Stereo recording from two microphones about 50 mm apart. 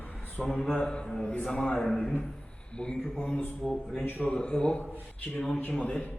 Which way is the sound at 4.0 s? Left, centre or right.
Left.